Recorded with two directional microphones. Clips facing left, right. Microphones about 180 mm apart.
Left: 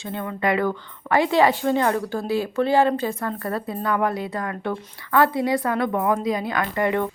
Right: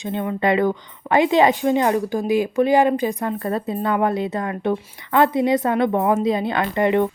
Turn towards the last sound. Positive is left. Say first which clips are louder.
# right 4 dB
turn(degrees=-20)  # may be behind; listen again after turning